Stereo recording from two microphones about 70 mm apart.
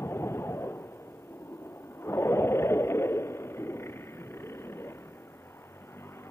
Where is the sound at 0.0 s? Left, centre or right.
Left.